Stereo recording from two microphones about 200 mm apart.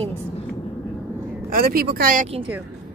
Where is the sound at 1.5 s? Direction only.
45° right (ahead or behind).